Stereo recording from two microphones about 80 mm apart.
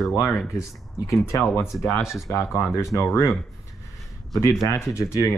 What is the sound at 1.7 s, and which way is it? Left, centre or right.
Speech, left.